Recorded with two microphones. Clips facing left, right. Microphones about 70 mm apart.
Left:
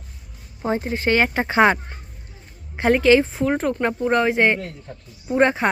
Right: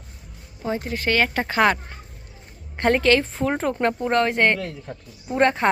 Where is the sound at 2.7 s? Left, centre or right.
Centre.